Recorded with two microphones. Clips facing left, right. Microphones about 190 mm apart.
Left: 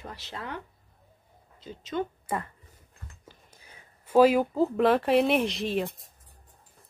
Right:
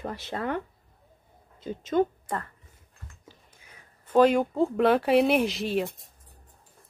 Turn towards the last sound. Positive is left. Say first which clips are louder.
# right 1 dB
turn(degrees=0)  # may be behind; listen again after turning